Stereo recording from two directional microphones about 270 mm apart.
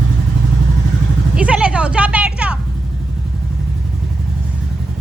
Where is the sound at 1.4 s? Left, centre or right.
Centre.